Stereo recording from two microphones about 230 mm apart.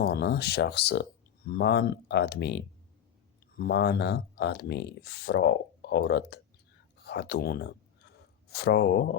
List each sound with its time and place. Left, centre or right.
0.0 s speech: left